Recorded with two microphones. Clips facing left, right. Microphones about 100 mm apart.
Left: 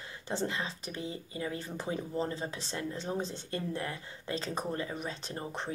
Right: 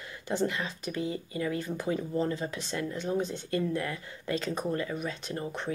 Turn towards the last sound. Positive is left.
turn(degrees=30)  # may be behind; listen again after turning